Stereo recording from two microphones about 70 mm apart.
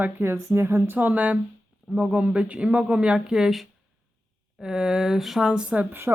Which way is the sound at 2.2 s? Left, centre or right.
Centre.